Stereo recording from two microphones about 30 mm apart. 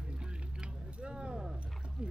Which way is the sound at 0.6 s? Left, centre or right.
Right.